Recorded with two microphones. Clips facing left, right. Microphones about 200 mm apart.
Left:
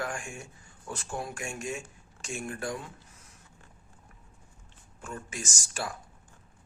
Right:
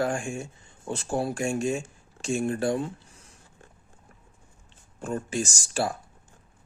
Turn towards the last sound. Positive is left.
turn(degrees=-30)  # may be behind; listen again after turning